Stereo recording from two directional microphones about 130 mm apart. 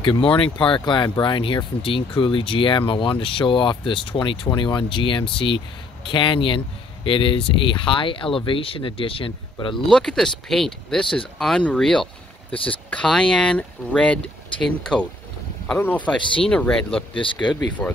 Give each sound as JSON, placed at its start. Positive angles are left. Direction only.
{"t": 0.0, "sound": "speech", "side_deg": 40}
{"t": 9.8, "sound": "speech", "side_deg": 5}
{"t": 17.1, "sound": "speech", "side_deg": 40}
{"t": 17.8, "sound": "speech", "side_deg": 5}